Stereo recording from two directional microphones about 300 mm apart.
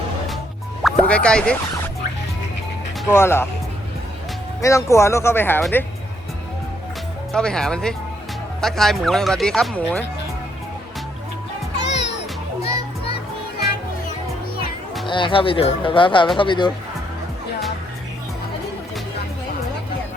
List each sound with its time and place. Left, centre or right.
0.8 s speech: centre
3.0 s speech: centre
4.6 s speech: centre
7.3 s speech: centre
11.7 s music: left
15.0 s speech: centre